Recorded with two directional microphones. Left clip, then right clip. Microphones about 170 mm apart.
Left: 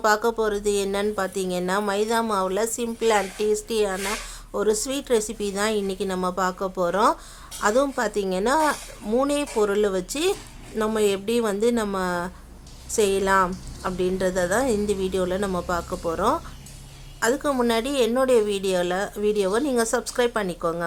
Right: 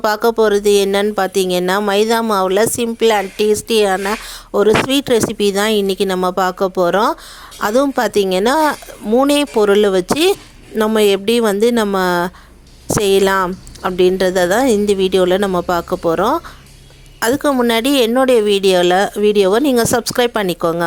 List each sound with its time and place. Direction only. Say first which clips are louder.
0.0 s speech: right 8 dB; 45° right (ahead or behind)